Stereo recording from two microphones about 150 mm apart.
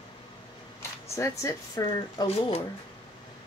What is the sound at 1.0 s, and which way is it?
Speech, 20° left (ahead or behind).